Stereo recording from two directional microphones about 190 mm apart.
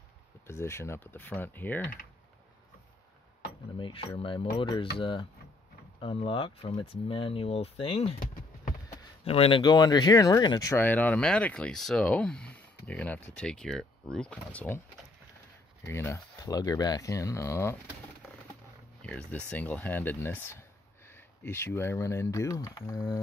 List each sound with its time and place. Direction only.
0.5 s speech: 15° left (ahead or behind)
3.7 s speech: 25° left (ahead or behind); by 14.8 s 10° left (ahead or behind)
15.8 s speech: 15° left (ahead or behind)
19.0 s speech: 5° left (ahead or behind)